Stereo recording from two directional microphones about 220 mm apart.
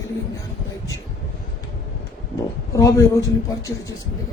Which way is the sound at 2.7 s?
15° left (ahead or behind).